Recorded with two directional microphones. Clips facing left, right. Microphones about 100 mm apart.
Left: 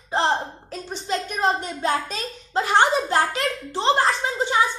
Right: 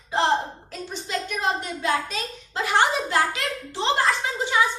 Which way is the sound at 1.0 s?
35° left (ahead or behind).